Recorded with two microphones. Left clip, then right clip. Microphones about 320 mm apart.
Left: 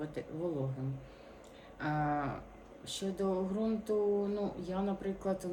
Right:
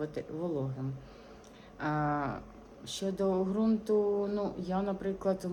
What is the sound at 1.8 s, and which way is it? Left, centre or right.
Speech, centre.